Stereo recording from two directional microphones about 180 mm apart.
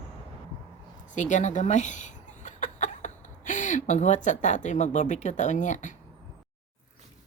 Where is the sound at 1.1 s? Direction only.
40° left (ahead or behind).